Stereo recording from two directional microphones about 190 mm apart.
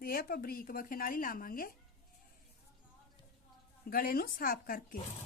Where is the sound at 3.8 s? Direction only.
50° left (ahead or behind).